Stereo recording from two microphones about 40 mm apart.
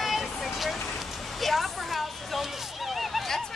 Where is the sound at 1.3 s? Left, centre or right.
Centre.